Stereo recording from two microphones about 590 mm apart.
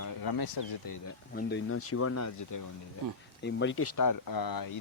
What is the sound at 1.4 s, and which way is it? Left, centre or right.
Speech, centre.